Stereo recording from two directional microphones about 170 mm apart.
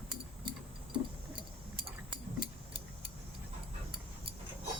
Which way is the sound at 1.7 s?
30° right (ahead or behind).